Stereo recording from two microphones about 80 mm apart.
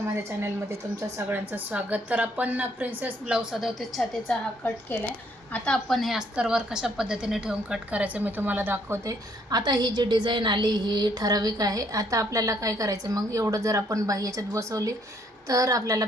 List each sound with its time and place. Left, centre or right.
0.1 s a woman's voice: right
1.3 s a woman's voice: right
3.3 s a woman's voice: centre
5.5 s a woman's voice: centre
6.0 s a woman's voice: centre; by 9.0 s right
9.0 s a woman's voice: right